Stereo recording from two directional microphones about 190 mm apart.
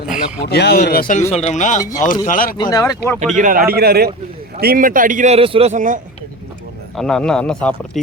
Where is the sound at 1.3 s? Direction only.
35° left (ahead or behind).